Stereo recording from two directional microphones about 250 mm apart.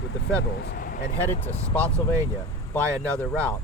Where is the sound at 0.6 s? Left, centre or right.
Left.